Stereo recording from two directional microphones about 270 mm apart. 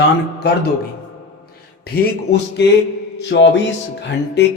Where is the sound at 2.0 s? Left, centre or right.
Left.